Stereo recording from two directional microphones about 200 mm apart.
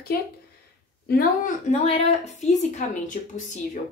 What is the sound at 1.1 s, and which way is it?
Speech, 45° left (ahead or behind).